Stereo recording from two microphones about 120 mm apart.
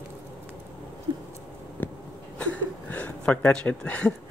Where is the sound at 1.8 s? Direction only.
15° left (ahead or behind).